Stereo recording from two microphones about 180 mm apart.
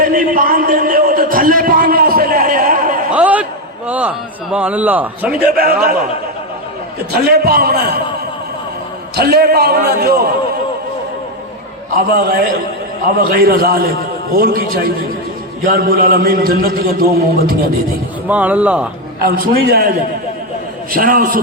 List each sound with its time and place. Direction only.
0.0 s a sound: 50° right (ahead or behind)
3.1 s a sound: 10° right (ahead or behind)
4.5 s speech: 10° right (ahead or behind)
5.5 s a man's voice: 55° right (ahead or behind)
7.1 s a man's voice: 60° right (ahead or behind)
9.1 s a man's voice: 60° right (ahead or behind)
11.9 s a man's voice: 55° right (ahead or behind)
18.3 s speech: 10° right (ahead or behind)
19.2 s a man's voice: 55° right (ahead or behind)
20.9 s a man's voice: 50° right (ahead or behind)